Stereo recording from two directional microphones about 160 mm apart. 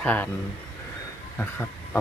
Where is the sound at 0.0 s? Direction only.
10° left (ahead or behind).